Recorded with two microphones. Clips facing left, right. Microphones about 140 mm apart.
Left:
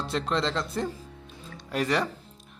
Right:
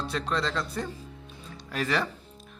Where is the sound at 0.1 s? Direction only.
25° left (ahead or behind).